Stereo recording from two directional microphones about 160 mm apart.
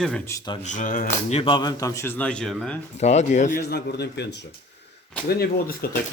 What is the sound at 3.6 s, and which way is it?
Speech, 90° left.